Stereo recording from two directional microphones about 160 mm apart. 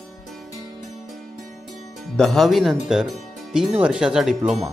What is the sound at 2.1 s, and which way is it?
Speech, centre (ahead or behind).